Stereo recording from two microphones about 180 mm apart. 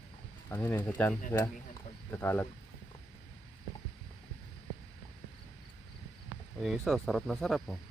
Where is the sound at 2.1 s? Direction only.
10° left (ahead or behind).